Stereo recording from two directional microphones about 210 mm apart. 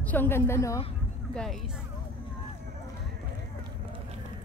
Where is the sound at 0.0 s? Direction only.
10° left (ahead or behind).